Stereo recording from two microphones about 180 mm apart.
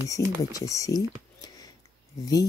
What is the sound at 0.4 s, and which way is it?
Speech, 20° left (ahead or behind).